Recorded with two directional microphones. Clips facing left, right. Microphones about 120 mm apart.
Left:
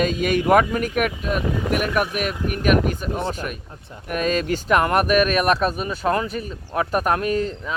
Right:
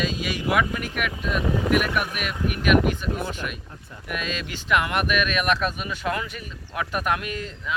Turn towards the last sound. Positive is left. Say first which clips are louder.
# left 7 dB
turn(degrees=40)  # may be behind; listen again after turning